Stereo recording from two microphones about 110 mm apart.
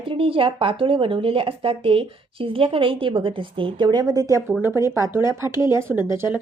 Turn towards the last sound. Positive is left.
turn(degrees=-20)  # may be behind; listen again after turning